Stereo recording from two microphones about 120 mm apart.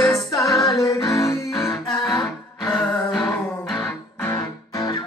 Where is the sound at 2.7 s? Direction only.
Centre (ahead or behind).